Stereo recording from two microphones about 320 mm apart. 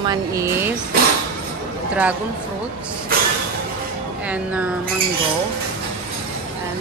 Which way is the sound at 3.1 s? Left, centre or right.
Right.